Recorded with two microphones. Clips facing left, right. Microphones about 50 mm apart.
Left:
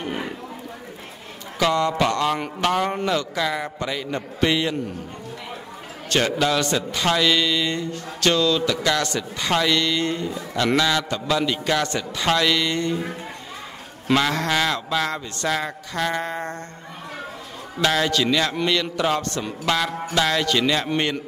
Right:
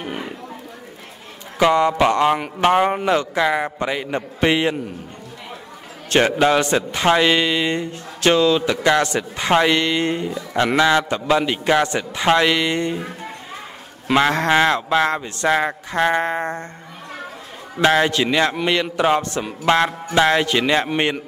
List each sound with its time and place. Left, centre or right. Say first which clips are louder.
0.0 s a sound: even; centre
1.6 s a man's voice: right 5 dB; right
6.0 s a man's voice: right 5 dB; right
17.7 s a man's voice: right 4 dB; right